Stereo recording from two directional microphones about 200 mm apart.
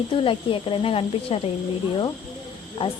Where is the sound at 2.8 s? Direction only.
25° left (ahead or behind).